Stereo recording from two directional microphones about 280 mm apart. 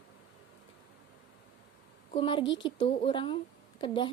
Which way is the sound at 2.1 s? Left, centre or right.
Centre.